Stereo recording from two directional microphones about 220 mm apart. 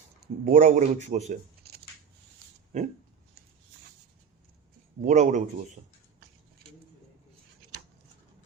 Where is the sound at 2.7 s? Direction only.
30° right (ahead or behind).